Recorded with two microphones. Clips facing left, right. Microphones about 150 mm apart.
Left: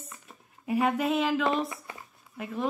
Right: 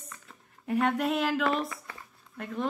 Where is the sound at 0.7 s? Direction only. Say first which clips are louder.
Left 1 dB; 5° left (ahead or behind).